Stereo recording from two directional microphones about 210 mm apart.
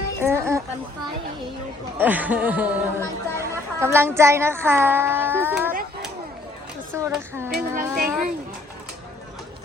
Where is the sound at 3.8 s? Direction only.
10° right (ahead or behind).